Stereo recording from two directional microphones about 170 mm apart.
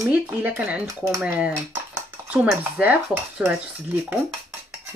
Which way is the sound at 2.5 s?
10° right (ahead or behind).